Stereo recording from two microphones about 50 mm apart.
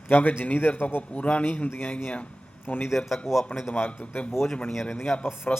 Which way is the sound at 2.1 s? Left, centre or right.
Left.